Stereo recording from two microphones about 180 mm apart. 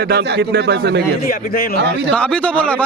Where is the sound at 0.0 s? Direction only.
60° right (ahead or behind).